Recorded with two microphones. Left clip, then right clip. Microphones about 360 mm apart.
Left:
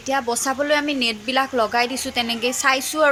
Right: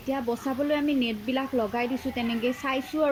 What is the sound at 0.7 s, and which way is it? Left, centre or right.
Speech, centre.